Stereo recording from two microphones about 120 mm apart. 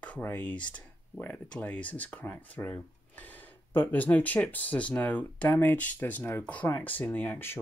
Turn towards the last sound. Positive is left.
turn(degrees=15)  # may be behind; listen again after turning